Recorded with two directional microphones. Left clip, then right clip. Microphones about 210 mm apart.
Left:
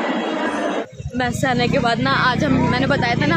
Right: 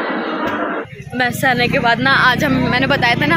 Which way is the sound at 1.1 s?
5° left (ahead or behind).